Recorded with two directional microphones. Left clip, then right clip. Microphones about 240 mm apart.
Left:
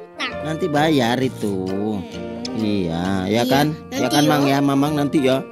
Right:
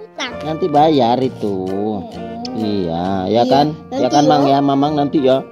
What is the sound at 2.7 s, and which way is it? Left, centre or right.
Speech, left.